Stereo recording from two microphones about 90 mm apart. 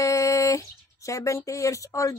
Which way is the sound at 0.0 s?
35° left (ahead or behind).